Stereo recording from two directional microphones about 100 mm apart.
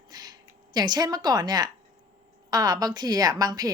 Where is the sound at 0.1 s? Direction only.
40° right (ahead or behind).